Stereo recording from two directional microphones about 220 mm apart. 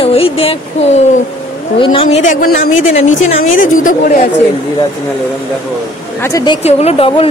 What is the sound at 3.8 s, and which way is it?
Speech, 35° left (ahead or behind).